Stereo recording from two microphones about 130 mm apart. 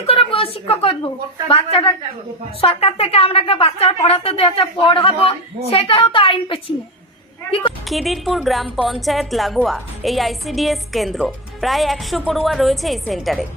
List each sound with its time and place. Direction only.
0.0 s a woman's voice: 45° left (ahead or behind)
7.9 s a woman's voice: centre (ahead or behind)